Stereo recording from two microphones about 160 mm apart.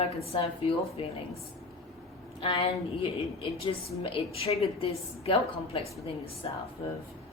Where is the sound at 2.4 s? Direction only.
35° left (ahead or behind).